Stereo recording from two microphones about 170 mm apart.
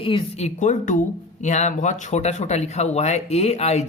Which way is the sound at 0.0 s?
35° left (ahead or behind).